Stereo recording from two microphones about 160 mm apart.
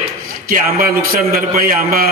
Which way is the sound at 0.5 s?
65° right (ahead or behind).